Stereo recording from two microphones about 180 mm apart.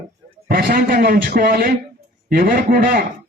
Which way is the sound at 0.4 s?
55° right (ahead or behind).